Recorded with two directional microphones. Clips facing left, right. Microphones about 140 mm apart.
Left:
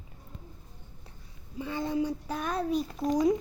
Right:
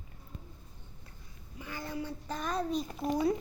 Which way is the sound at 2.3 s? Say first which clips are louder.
Left 3 dB; 5° left (ahead or behind).